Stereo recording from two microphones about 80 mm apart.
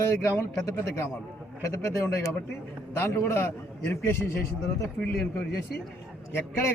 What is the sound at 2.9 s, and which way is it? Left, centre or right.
A man's voice, left.